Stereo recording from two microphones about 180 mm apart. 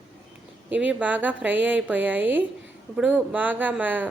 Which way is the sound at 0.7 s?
10° right (ahead or behind).